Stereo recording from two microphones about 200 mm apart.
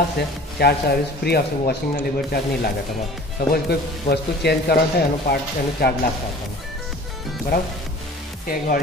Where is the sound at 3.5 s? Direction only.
55° left (ahead or behind).